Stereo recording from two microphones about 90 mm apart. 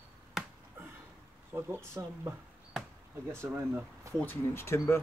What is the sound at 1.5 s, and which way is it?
Speech, 25° right (ahead or behind).